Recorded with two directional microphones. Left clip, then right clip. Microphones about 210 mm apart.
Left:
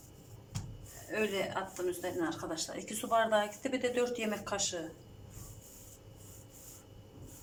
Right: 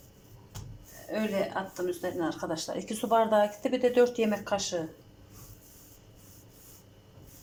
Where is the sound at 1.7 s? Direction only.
20° right (ahead or behind).